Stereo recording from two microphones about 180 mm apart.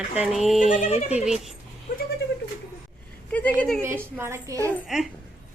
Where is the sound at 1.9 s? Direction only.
50° left (ahead or behind).